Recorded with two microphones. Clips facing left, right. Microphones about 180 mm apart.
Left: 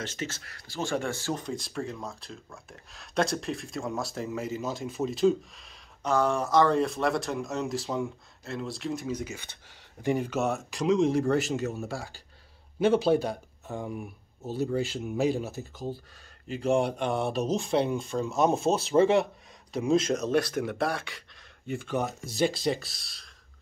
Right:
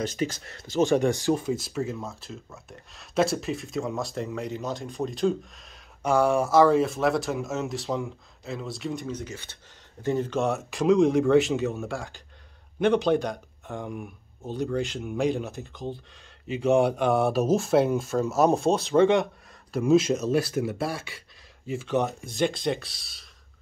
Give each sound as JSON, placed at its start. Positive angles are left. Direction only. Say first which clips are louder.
{"t": 0.0, "sound": "speech", "louder": "right 7 dB", "side_deg": -15}
{"t": 6.0, "sound": "speech", "louder": "right 4 dB", "side_deg": -10}
{"t": 12.7, "sound": "speech", "louder": "right 1 dB", "side_deg": 5}